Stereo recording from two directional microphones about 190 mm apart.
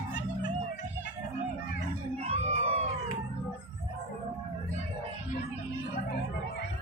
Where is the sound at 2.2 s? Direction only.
30° right (ahead or behind).